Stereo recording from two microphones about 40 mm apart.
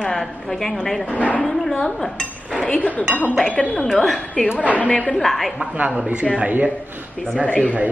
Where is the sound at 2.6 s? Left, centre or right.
Left.